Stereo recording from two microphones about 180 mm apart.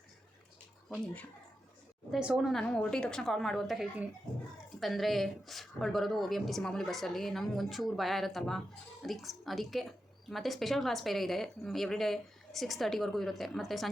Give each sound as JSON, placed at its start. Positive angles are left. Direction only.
{"t": 0.9, "sound": "a woman's voice", "side_deg": 5}